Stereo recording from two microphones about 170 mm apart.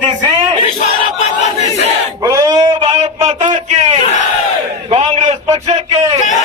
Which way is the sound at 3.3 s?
40° right (ahead or behind).